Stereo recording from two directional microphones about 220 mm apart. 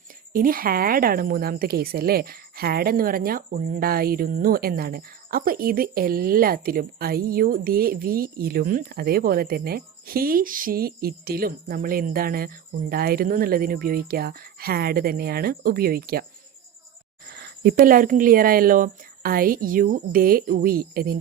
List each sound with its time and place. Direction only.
0.3 s speech: 40° right (ahead or behind)
17.3 s speech: 45° right (ahead or behind)